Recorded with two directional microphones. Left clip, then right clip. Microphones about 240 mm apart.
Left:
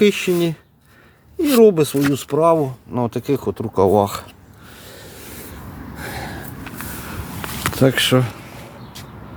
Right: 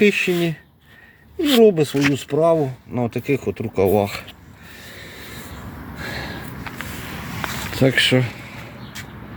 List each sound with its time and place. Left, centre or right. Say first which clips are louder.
0.0 s speech: left 1 dB; centre
6.0 s snort: even; centre
6.8 s vehicle: even; left
7.8 s speech: even; centre